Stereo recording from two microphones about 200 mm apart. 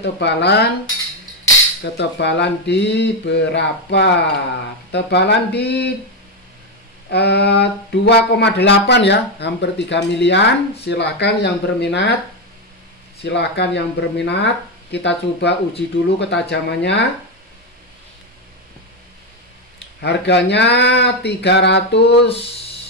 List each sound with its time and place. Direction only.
0.0 s speech: 60° left (ahead or behind)
1.8 s speech: 60° left (ahead or behind)
7.1 s speech: 55° left (ahead or behind)
13.2 s speech: 60° left (ahead or behind)
20.0 s speech: 60° left (ahead or behind)